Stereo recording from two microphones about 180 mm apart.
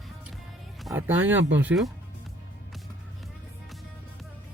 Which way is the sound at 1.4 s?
90° right.